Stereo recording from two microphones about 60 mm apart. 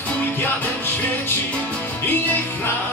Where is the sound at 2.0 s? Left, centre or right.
Left.